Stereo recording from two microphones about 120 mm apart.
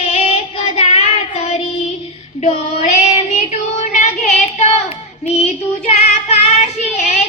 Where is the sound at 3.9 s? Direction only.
90° left; by 7.1 s 70° left (ahead or behind).